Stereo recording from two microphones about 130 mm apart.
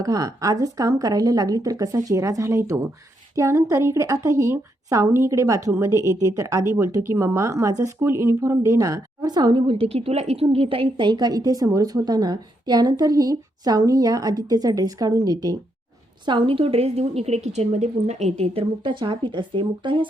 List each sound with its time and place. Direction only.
0.0 s a woman's voice: 30° right (ahead or behind)